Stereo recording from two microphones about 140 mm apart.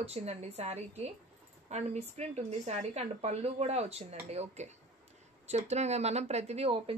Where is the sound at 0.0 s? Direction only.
50° right (ahead or behind).